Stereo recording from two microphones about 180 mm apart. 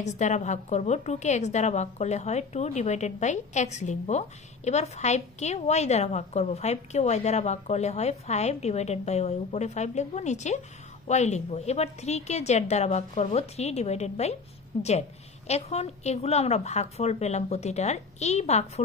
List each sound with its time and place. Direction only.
0.0 s a woman's voice: 40° left (ahead or behind)